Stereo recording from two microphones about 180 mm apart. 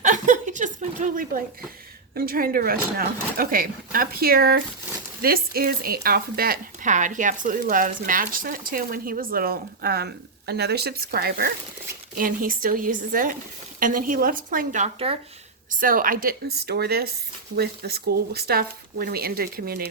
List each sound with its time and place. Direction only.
0.0 s chuckle: 45° right (ahead or behind)
2.1 s speech: 55° right (ahead or behind)
14.9 s speech: 30° right (ahead or behind)
15.7 s speech: 50° right (ahead or behind)